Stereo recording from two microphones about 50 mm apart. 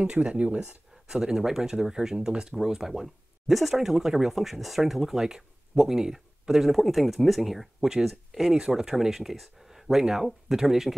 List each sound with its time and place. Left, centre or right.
0.0 s speech: right
1.0 s speech: centre